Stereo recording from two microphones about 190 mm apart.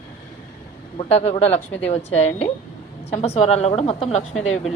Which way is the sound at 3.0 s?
35° left (ahead or behind).